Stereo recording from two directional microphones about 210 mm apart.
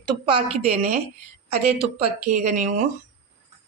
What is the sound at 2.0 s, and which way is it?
Speech, 35° right (ahead or behind).